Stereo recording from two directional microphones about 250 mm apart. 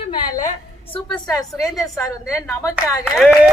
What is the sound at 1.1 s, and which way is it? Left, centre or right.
Speech, centre.